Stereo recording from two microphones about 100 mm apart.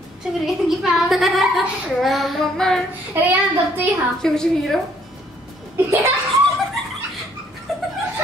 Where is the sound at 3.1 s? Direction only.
20° right (ahead or behind).